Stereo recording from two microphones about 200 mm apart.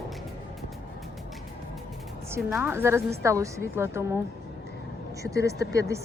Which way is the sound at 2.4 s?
5° right (ahead or behind).